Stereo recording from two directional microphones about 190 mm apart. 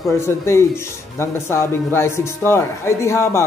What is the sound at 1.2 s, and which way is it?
Speech, 15° left (ahead or behind).